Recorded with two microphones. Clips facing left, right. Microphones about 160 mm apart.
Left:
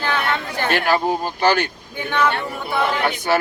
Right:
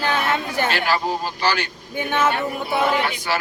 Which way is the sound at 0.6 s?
55° left (ahead or behind).